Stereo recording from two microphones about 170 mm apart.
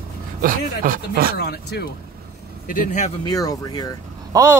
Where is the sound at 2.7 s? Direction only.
50° left (ahead or behind).